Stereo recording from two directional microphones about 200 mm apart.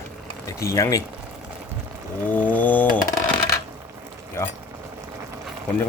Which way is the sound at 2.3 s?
10° left (ahead or behind).